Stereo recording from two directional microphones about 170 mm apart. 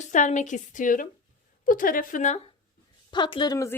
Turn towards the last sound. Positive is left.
turn(degrees=20)  # may be behind; listen again after turning